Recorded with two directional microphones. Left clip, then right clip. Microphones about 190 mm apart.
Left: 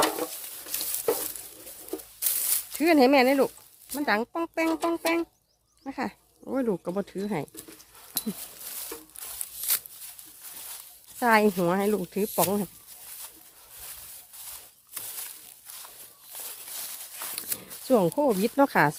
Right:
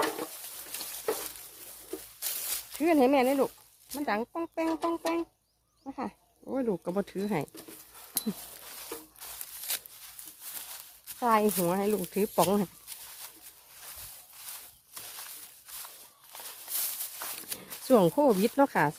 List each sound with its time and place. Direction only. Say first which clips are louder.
0.0 s a sound: left 5 dB; 40° left (ahead or behind)
2.2 s a sound: left 5 dB; 35° left (ahead or behind)
3.8 s speech: left 5 dB; 25° left (ahead or behind)
4.7 s speech: left 4 dB; 40° left (ahead or behind); by 6.9 s 25° left (ahead or behind)
6.9 s speech: left 1 dB; 5° left (ahead or behind)
9.7 s a sound: left 4 dB; 40° left (ahead or behind)
11.2 s speech: left 4 dB; 30° left (ahead or behind)
12.1 s speech: even; centre (ahead or behind)
16.3 s walk: left 2 dB; 25° left (ahead or behind)
17.8 s speech: even; centre (ahead or behind)
18.5 s speech: left 4 dB; 15° left (ahead or behind)